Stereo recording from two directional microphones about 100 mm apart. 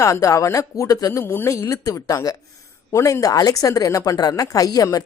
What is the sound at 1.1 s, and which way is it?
A woman's voice, 25° left (ahead or behind).